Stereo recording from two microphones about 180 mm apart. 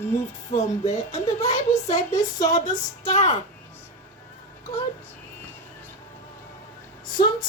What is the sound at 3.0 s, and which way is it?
Speech, 40° left (ahead or behind).